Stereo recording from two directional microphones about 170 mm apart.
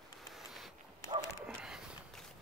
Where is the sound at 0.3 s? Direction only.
Centre (ahead or behind).